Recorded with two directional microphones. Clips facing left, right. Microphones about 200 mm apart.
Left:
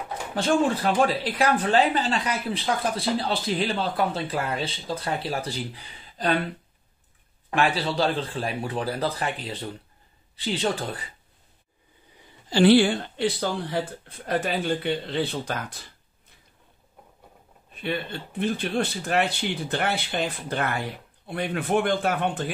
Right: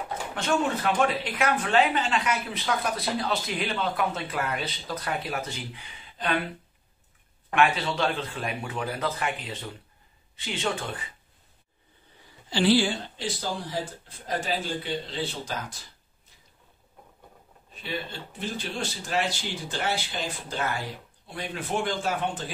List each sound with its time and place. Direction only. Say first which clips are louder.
0.3 s speech: left 5 dB; 35° left (ahead or behind)
7.5 s speech: left 1 dB; 35° left (ahead or behind)
12.4 s speech: left 5 dB; 55° left (ahead or behind)
18.4 s speech: left 7 dB; 60° left (ahead or behind)